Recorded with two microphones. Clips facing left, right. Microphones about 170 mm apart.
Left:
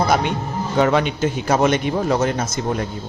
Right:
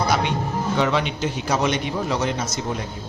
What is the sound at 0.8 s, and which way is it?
A man's voice, 50° left (ahead or behind).